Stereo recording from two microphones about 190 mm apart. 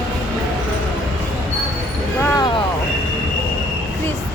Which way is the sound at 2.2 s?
20° left (ahead or behind).